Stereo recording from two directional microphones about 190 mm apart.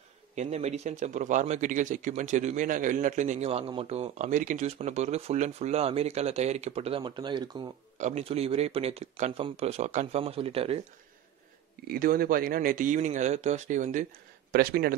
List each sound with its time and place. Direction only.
0.4 s speech: 35° right (ahead or behind)
8.0 s speech: 35° right (ahead or behind)
11.9 s speech: 50° right (ahead or behind)
14.5 s speech: 55° right (ahead or behind)